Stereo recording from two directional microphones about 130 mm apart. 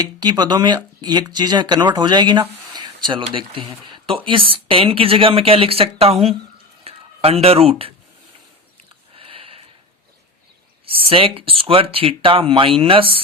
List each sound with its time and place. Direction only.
0.2 s speech: 35° right (ahead or behind)
2.7 s a sound: 35° right (ahead or behind)
3.3 s speech: 40° right (ahead or behind)
9.1 s sniff: 45° right (ahead or behind)
10.8 s speech: 45° right (ahead or behind)